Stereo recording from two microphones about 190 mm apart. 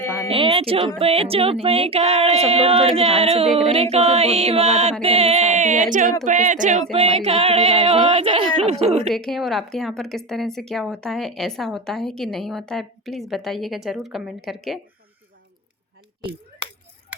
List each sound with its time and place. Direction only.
0.3 s speech: 30° right (ahead or behind)
9.0 s speech: centre (ahead or behind)
16.2 s speech: 25° right (ahead or behind)